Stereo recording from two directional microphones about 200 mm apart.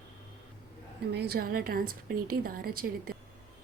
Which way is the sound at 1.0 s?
55° right (ahead or behind).